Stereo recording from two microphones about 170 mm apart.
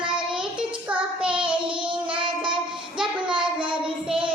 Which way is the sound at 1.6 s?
30° right (ahead or behind).